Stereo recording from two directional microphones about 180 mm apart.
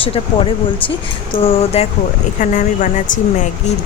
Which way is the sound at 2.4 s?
45° left (ahead or behind).